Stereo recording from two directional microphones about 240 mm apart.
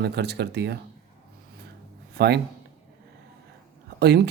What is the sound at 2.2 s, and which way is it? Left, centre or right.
Speech, right.